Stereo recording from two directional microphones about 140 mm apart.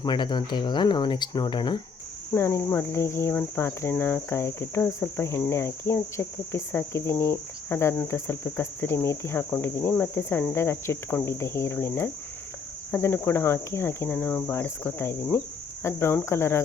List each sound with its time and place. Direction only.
0.0 s speech: 30° left (ahead or behind)
2.3 s cricket: 20° left (ahead or behind)